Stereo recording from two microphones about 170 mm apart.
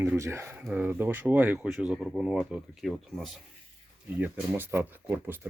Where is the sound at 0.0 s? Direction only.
15° right (ahead or behind).